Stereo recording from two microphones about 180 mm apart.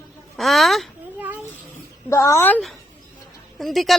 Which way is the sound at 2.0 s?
15° left (ahead or behind).